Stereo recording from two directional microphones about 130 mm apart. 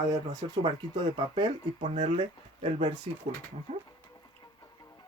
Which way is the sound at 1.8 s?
50° right (ahead or behind).